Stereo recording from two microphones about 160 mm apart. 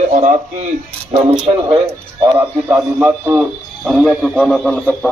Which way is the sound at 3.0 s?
10° right (ahead or behind).